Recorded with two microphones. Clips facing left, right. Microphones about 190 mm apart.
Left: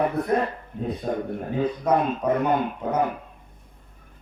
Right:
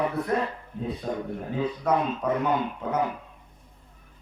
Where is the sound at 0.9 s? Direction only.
50° left (ahead or behind).